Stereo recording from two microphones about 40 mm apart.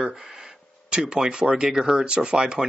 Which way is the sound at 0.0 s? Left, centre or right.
Centre.